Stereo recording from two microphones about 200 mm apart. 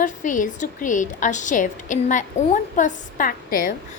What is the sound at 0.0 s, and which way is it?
A woman's voice, 40° left (ahead or behind).